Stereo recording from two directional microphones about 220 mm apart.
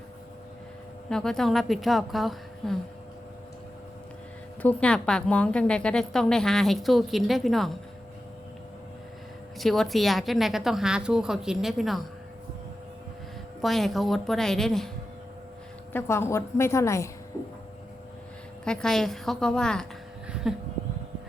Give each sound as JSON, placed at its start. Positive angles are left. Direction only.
{"t": 1.1, "sound": "a woman's voice", "side_deg": 0}
{"t": 4.6, "sound": "a woman's voice", "side_deg": 5}
{"t": 9.6, "sound": "a woman's voice", "side_deg": 0}
{"t": 13.6, "sound": "a woman's voice", "side_deg": 0}
{"t": 15.9, "sound": "a woman's voice", "side_deg": 10}
{"t": 18.6, "sound": "a woman's voice", "side_deg": 5}